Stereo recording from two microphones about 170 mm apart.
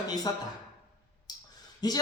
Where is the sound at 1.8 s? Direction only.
25° left (ahead or behind).